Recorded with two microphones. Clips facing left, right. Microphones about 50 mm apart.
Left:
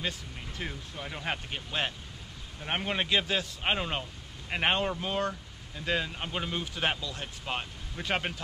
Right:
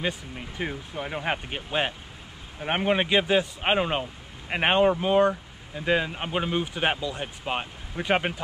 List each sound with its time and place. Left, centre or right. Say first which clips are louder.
0.0 s speech: right 6 dB; centre